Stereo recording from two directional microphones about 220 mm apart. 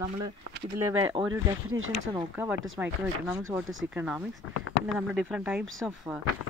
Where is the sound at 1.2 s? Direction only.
25° right (ahead or behind).